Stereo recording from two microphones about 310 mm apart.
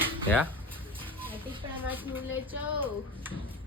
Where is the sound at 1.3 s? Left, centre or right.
Centre.